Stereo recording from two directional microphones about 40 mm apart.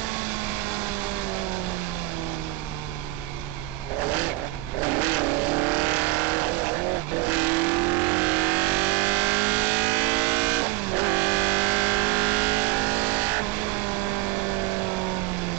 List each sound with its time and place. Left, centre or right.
4.8 s vehicle: right